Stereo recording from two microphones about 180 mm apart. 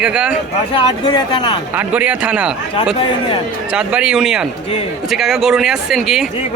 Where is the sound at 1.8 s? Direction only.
5° right (ahead or behind).